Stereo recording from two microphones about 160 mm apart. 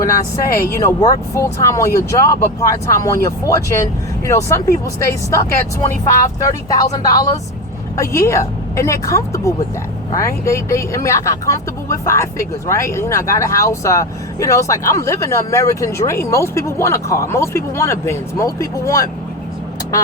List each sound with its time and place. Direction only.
0.5 s speech: 20° left (ahead or behind)
7.9 s speech: 20° left (ahead or behind)